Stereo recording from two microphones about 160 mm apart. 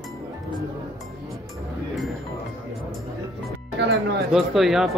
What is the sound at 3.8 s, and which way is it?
Music, 90° right.